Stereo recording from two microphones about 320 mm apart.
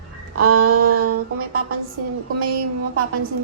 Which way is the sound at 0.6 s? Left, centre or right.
Right.